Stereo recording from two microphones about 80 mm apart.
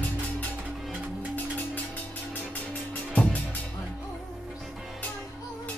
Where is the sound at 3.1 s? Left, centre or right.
Centre.